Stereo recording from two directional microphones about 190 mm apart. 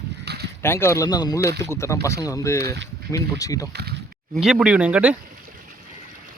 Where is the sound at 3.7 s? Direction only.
60° right (ahead or behind).